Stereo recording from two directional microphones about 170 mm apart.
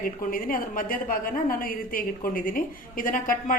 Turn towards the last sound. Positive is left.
turn(degrees=55)  # may be behind; listen again after turning